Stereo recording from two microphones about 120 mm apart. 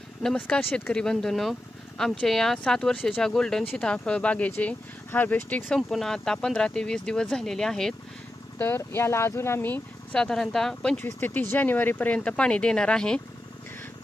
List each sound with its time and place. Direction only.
0.2 s speech: 5° left (ahead or behind)
0.6 s speech: 15° left (ahead or behind)
5.8 s speech: centre (ahead or behind)
8.5 s speech: 20° left (ahead or behind)
10.1 s speech: 5° left (ahead or behind)
11.0 s speech: 15° left (ahead or behind)